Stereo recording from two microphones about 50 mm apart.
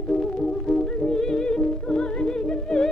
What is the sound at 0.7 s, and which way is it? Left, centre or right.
Music, centre.